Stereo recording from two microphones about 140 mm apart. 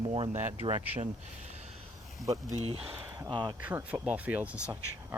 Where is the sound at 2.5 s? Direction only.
45° right (ahead or behind).